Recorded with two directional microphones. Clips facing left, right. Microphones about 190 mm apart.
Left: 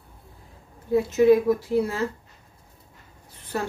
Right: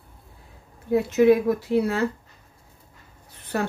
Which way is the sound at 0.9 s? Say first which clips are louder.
Even; 65° right (ahead or behind).